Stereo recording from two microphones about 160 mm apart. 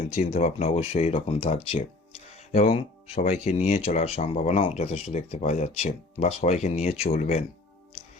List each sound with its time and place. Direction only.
0.1 s speech: 45° left (ahead or behind)